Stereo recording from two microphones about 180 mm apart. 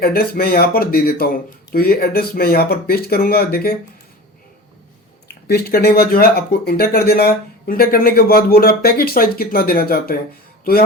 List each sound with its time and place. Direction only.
0.0 s speech: 55° left (ahead or behind)
5.5 s speech: 60° left (ahead or behind)